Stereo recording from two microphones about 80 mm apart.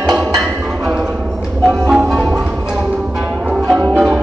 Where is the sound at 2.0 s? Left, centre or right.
Centre.